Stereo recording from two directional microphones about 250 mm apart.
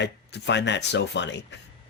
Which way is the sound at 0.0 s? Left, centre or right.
Left.